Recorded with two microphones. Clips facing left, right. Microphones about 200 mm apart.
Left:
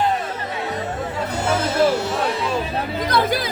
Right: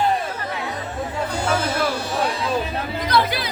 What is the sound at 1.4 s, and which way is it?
Music, 25° left (ahead or behind).